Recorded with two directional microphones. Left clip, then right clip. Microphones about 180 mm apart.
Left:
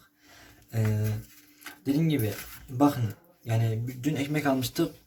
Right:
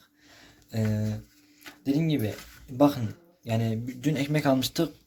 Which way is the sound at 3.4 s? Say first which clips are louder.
Right 3 dB; 25° right (ahead or behind).